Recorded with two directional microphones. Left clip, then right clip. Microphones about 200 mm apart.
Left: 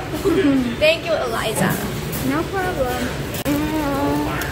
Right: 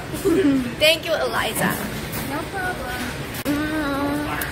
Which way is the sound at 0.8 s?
55° right (ahead or behind).